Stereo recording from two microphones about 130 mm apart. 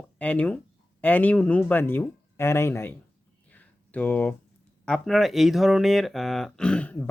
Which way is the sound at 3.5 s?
15° left (ahead or behind).